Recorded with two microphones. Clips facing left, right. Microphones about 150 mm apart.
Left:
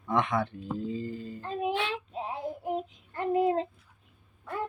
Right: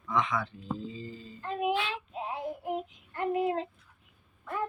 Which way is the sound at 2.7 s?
35° left (ahead or behind).